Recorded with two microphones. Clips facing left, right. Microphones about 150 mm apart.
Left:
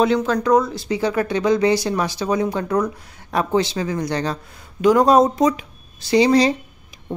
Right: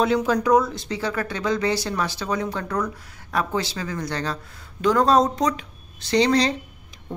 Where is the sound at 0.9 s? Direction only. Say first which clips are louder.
Left 7 dB; 15° left (ahead or behind).